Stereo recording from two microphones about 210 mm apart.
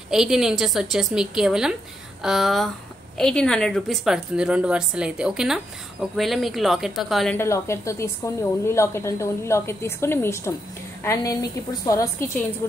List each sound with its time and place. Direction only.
0.1 s a woman's voice: centre (ahead or behind)
7.3 s a woman's voice: 15° left (ahead or behind)
11.8 s a woman's voice: 15° left (ahead or behind)